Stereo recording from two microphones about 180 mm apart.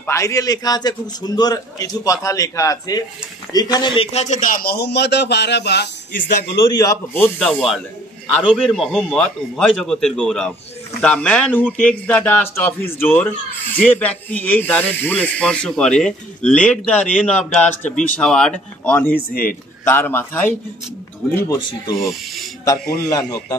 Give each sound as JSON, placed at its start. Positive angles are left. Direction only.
{"t": 0.0, "sound": "a man's voice", "side_deg": 15}
{"t": 6.7, "sound": "a man's voice", "side_deg": 20}
{"t": 7.3, "sound": "a man's voice", "side_deg": 5}
{"t": 19.1, "sound": "a man's voice", "side_deg": 55}
{"t": 19.8, "sound": "speech", "side_deg": 10}
{"t": 21.5, "sound": "a man's voice", "side_deg": 25}
{"t": 21.9, "sound": "a man's voice", "side_deg": 0}
{"t": 23.0, "sound": "a man's voice", "side_deg": 20}